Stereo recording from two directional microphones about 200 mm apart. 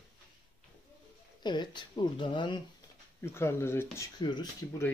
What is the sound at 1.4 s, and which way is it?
Speech, 20° left (ahead or behind).